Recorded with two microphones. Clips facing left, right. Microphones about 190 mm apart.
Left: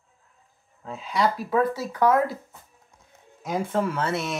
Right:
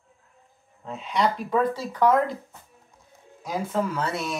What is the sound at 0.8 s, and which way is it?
Speech, centre (ahead or behind).